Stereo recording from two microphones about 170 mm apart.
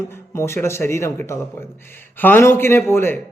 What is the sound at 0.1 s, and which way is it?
Speech, 15° left (ahead or behind).